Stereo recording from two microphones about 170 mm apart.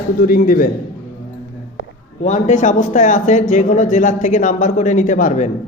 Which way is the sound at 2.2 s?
45° left (ahead or behind).